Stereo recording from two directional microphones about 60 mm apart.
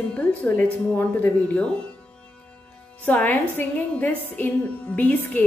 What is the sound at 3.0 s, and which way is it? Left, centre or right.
A woman's voice, left.